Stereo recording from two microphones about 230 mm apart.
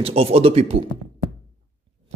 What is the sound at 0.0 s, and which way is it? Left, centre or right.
Speech, right.